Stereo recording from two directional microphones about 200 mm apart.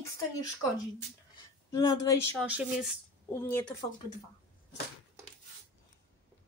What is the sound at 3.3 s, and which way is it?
Speech, 10° left (ahead or behind).